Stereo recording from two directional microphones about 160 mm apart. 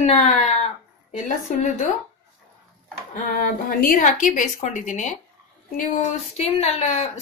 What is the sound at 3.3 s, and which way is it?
A woman's voice, 55° left (ahead or behind).